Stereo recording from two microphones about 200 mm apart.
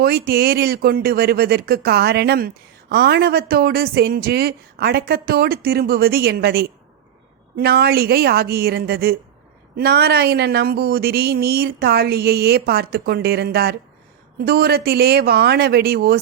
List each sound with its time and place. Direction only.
0.0 s speech: 50° right (ahead or behind)